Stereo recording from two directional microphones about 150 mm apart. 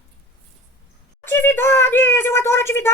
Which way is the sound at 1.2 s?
15° left (ahead or behind).